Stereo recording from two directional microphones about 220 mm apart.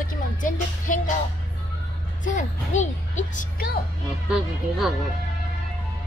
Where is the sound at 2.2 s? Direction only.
35° left (ahead or behind).